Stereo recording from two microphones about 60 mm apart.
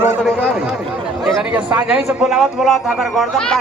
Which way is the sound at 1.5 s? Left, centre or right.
Right.